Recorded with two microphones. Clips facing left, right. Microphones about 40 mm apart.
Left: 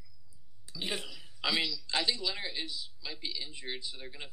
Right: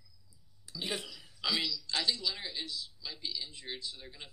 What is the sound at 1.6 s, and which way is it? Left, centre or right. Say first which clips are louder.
A man's voice: left 2 dB; left.